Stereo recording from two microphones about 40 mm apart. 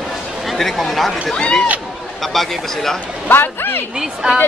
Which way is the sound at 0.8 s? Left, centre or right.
Centre.